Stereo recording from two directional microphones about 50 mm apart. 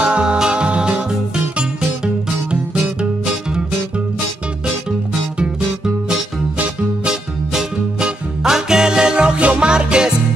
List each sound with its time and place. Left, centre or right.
0.0 s music: centre
2.7 s music: centre
7.1 s music: centre